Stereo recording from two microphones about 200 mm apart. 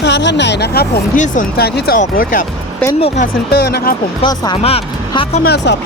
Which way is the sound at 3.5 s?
50° left (ahead or behind).